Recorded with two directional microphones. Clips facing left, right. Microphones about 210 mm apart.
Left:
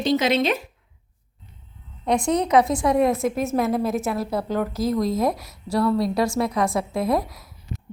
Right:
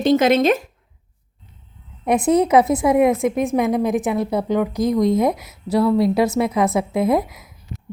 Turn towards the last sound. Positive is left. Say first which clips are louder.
# right 4 dB
turn(degrees=-20)  # may be behind; listen again after turning